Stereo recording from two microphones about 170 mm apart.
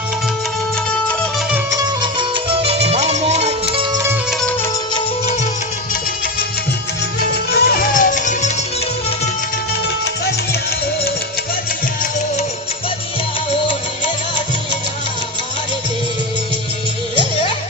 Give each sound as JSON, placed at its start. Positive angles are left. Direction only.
{"t": 2.0, "sound": "music", "side_deg": -30}
{"t": 4.3, "sound": "music", "side_deg": 0}
{"t": 7.5, "sound": "music", "side_deg": 60}